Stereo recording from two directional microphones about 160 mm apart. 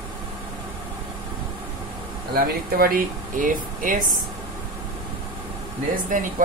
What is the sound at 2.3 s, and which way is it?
Speech, 65° right (ahead or behind).